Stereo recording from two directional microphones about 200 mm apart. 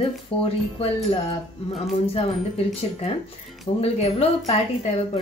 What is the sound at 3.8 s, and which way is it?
Speech, 30° left (ahead or behind).